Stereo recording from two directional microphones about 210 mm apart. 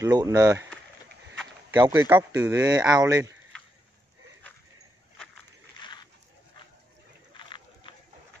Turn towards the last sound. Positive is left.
turn(degrees=25)  # may be behind; listen again after turning